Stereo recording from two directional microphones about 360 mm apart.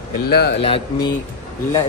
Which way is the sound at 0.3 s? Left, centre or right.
Left.